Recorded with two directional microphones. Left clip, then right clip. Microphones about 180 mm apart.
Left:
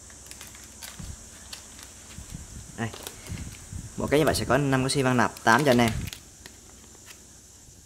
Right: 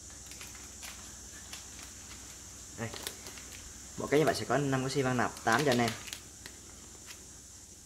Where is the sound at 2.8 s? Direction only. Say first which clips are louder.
Left 7 dB; 55° left (ahead or behind).